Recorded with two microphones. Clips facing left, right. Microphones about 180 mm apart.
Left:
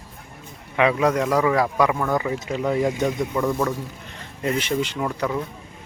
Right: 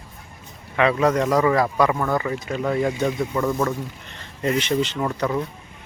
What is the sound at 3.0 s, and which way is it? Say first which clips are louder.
Speech: even; 5° left (ahead or behind).